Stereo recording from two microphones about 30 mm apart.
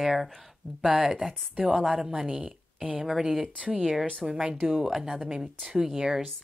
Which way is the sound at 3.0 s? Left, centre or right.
Centre.